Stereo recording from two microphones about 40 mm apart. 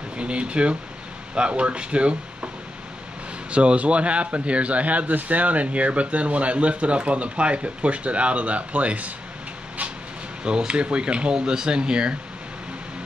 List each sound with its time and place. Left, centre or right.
0.2 s speech: right
3.5 s a man's voice: right
10.4 s speech: right